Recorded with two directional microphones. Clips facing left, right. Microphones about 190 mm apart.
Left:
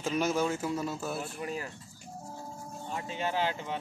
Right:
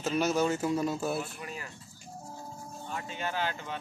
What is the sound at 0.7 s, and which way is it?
Speech, 15° right (ahead or behind).